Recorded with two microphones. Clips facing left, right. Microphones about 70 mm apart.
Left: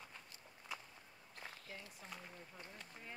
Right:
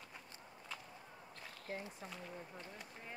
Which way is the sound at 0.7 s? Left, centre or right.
Centre.